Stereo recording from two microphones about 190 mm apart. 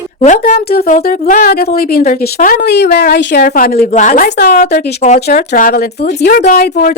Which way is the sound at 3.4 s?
50° left (ahead or behind).